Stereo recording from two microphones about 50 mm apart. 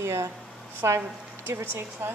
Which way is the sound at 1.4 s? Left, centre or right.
Right.